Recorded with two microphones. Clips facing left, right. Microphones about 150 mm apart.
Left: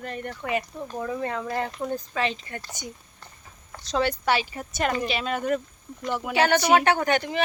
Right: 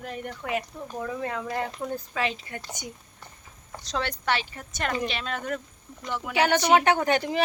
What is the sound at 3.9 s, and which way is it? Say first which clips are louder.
Speech: left 4 dB; 5° left (ahead or behind).